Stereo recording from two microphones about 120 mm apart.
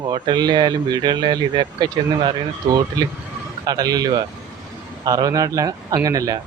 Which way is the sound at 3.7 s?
30° right (ahead or behind).